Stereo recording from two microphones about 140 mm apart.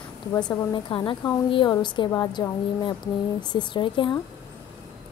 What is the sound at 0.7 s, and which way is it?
A woman's voice, 35° left (ahead or behind).